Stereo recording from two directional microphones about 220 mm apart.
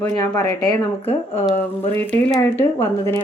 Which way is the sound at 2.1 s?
10° left (ahead or behind).